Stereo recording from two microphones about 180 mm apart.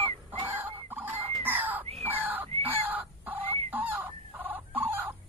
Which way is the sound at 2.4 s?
30° right (ahead or behind).